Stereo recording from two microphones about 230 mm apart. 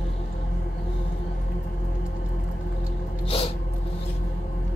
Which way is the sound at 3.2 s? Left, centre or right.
Left.